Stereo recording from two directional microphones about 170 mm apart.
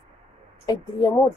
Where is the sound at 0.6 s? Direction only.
20° left (ahead or behind).